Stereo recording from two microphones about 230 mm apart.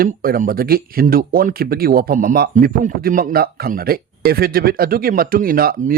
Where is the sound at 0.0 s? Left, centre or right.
Right.